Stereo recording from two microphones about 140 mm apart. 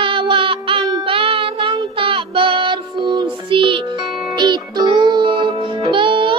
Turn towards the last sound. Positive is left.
turn(degrees=-35)  # may be behind; listen again after turning